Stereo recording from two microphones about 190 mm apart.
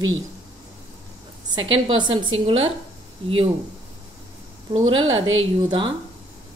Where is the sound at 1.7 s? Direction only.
25° right (ahead or behind).